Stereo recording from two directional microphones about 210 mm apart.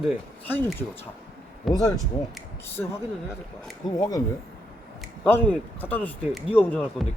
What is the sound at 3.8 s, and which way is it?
Speech, 15° left (ahead or behind).